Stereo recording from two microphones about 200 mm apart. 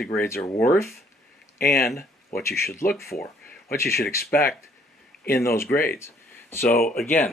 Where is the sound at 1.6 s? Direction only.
50° left (ahead or behind).